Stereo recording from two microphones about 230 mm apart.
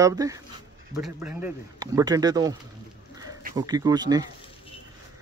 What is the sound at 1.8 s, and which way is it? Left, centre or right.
Speech, centre.